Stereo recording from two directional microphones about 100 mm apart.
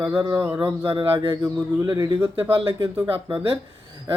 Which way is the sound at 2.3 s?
65° right (ahead or behind).